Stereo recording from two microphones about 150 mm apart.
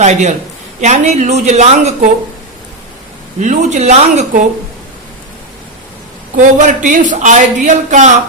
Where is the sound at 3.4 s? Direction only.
50° right (ahead or behind).